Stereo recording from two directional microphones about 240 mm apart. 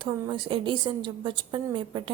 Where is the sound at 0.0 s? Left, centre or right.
Centre.